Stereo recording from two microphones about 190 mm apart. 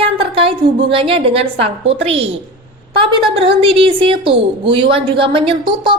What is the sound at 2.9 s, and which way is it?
A woman's voice, 25° right (ahead or behind).